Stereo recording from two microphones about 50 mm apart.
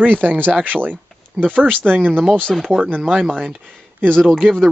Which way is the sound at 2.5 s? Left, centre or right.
Centre.